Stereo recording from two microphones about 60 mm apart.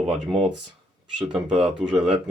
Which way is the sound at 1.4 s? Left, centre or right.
Centre.